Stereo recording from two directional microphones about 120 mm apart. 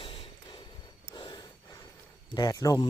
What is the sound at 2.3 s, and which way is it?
Speech, 30° left (ahead or behind).